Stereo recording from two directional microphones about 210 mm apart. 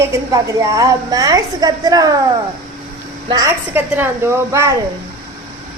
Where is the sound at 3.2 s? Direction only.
15° right (ahead or behind).